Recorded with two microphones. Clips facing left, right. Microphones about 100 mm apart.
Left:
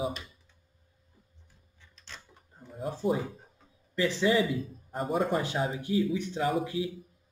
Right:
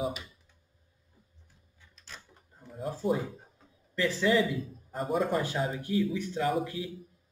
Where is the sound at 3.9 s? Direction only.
15° left (ahead or behind).